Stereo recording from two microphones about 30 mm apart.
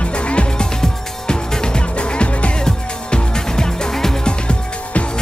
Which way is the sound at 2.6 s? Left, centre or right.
Left.